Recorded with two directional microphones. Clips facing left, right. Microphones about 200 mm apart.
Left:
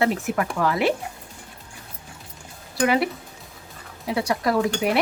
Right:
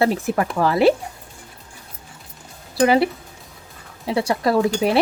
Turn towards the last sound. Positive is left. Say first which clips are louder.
# right 4 dB
turn(degrees=-30)  # may be behind; listen again after turning